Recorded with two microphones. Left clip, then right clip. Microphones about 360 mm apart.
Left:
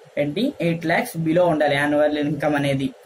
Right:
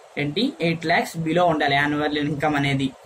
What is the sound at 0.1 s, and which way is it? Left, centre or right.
Speech, centre.